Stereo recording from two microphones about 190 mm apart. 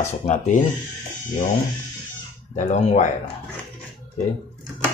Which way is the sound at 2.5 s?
40° left (ahead or behind).